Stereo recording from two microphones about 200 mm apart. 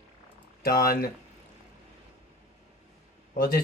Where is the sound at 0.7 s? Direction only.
50° left (ahead or behind).